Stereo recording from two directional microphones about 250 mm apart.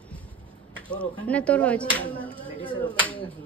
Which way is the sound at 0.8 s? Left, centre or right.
Centre.